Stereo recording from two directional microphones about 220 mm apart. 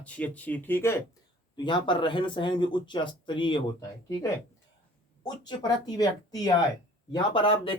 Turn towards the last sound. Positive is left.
turn(degrees=25)  # may be behind; listen again after turning